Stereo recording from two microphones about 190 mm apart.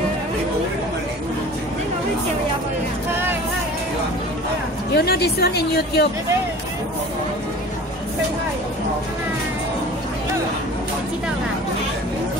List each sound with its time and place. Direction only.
4.9 s a woman's voice: 55° left (ahead or behind)